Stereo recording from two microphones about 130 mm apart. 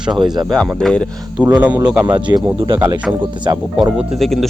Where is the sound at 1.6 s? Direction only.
10° right (ahead or behind).